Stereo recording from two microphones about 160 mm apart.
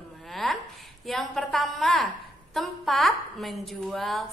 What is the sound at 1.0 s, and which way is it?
A woman's voice, centre (ahead or behind).